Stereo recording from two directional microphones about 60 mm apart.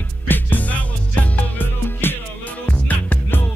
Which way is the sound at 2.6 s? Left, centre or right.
Left.